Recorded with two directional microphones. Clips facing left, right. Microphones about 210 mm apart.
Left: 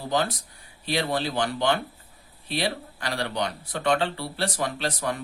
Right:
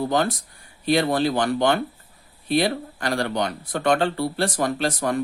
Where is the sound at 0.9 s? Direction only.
50° right (ahead or behind).